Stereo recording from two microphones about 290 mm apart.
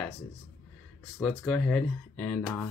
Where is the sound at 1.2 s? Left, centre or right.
Centre.